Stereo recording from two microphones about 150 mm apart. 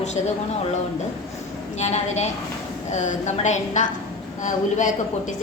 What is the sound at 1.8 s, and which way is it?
A woman's voice, 50° left (ahead or behind).